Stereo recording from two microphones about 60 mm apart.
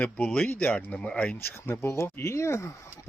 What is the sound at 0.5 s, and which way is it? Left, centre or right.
Speech, left.